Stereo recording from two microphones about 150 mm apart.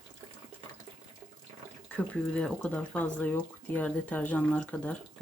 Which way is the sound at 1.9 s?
5° left (ahead or behind).